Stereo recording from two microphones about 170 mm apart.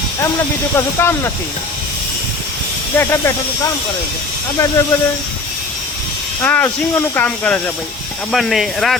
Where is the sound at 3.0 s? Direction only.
15° left (ahead or behind).